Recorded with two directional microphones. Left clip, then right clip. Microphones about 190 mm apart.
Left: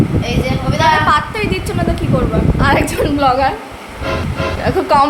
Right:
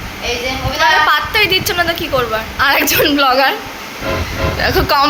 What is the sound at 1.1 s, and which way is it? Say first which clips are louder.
A woman's voice: right 3 dB; 5° left (ahead or behind).